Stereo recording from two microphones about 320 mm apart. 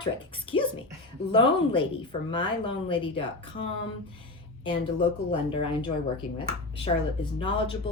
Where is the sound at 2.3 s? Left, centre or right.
Centre.